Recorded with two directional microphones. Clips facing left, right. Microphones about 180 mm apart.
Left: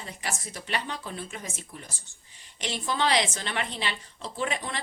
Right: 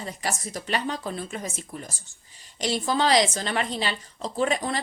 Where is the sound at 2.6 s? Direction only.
40° right (ahead or behind).